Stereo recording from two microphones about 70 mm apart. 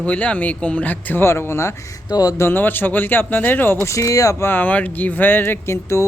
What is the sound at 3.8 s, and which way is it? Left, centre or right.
Speech, left.